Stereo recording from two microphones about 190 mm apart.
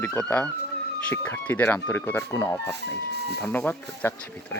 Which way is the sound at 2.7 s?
60° right (ahead or behind).